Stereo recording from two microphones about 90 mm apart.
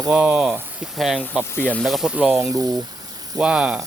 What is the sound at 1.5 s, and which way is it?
Speech, 15° left (ahead or behind).